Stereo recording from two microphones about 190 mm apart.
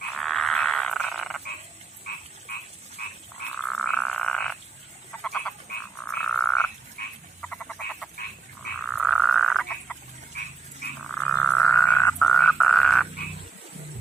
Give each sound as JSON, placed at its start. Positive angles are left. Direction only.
{"t": 0.2, "sound": "frog", "side_deg": 0}
{"t": 2.5, "sound": "frog", "side_deg": 50}
{"t": 3.6, "sound": "frog", "side_deg": 5}
{"t": 7.0, "sound": "frog", "side_deg": 55}
{"t": 7.4, "sound": "frog", "side_deg": 5}
{"t": 11.1, "sound": "frog", "side_deg": 10}